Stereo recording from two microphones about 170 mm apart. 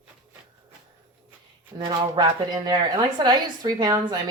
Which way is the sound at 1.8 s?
25° right (ahead or behind).